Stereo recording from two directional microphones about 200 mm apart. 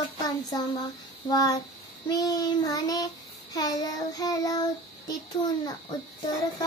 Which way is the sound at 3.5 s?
20° left (ahead or behind).